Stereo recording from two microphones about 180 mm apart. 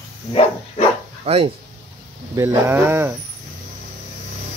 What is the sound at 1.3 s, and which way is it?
Speech, 35° right (ahead or behind).